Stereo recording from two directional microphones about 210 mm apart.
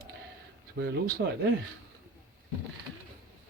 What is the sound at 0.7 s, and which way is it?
Speech, 50° right (ahead or behind).